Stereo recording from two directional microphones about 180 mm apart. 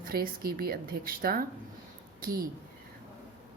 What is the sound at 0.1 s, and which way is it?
A woman's voice, 55° right (ahead or behind).